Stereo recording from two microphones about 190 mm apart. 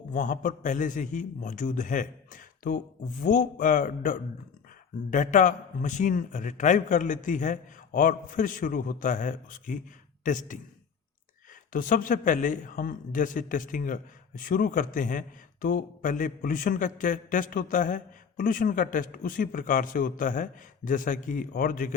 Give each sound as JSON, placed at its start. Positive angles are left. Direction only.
{"t": 0.1, "sound": "a man's voice", "side_deg": 40}
{"t": 11.7, "sound": "a man's voice", "side_deg": 45}